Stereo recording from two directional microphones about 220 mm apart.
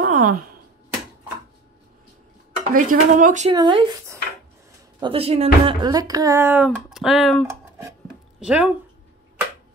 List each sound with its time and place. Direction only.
0.0 s a sound: 35° right (ahead or behind)
2.7 s speech: 40° right (ahead or behind)
3.5 s speech: 20° right (ahead or behind); by 8.7 s 5° right (ahead or behind)